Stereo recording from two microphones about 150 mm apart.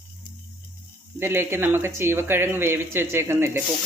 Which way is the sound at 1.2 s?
15° right (ahead or behind).